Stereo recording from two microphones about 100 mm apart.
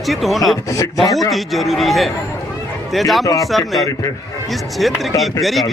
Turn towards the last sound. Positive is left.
turn(degrees=0)  # may be behind; listen again after turning